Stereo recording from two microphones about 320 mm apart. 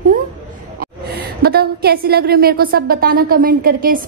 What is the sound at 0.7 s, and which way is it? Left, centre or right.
A woman's voice, right.